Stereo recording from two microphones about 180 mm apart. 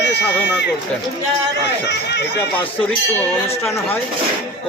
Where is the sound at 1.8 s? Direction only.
70° left (ahead or behind).